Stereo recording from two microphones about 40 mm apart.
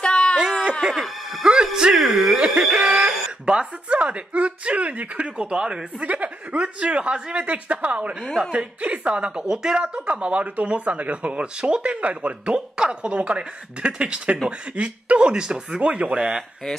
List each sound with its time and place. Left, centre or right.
0.0 s a sound: left
0.9 s music: centre
1.4 s speech: centre
2.3 s a woman's voice: right
2.6 s speech: centre
3.4 s speech: right
5.4 s a woman's voice: right
9.8 s speech: right
12.5 s a woman's voice: right
13.0 s a woman's voice: right